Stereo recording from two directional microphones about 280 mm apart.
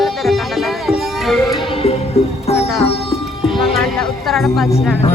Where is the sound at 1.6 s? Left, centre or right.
Centre.